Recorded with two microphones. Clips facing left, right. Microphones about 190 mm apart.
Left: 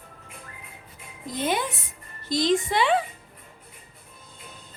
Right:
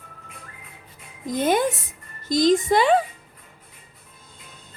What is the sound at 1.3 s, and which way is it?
A child's voice, 45° right (ahead or behind).